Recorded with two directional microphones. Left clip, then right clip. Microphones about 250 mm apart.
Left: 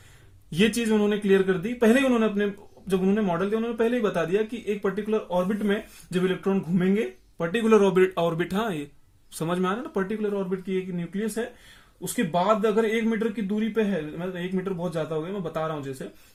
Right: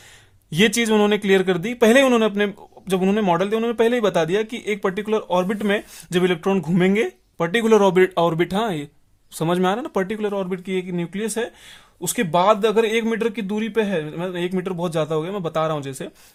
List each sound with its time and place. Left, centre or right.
0.5 s speech: right